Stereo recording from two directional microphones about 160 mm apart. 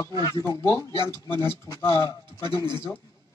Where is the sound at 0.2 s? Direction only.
20° left (ahead or behind).